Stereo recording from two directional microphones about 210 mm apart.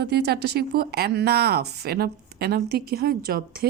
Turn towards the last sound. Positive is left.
turn(degrees=-45)  # may be behind; listen again after turning